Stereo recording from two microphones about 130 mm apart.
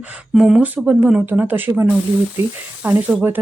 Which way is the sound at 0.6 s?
10° right (ahead or behind).